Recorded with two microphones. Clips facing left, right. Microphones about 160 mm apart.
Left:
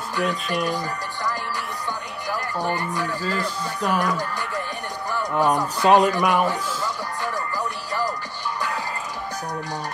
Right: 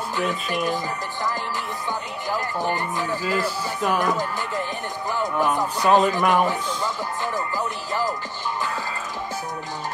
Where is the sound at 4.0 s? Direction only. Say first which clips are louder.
Right 1 dB; 20° right (ahead or behind).